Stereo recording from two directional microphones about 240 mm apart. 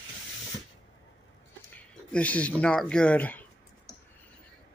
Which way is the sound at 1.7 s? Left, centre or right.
Centre.